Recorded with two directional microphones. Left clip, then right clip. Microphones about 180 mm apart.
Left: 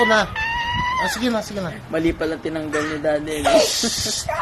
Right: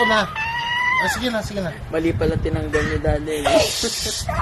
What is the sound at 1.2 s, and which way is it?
Speech, 25° left (ahead or behind).